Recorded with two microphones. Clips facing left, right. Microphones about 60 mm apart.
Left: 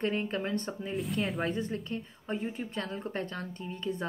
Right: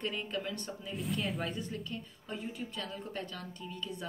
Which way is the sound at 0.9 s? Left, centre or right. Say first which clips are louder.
Left 3 dB; centre.